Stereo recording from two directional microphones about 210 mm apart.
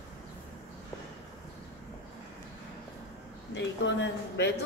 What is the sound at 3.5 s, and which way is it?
Speech, 60° left (ahead or behind).